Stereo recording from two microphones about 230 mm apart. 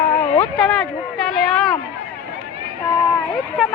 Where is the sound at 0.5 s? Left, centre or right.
Centre.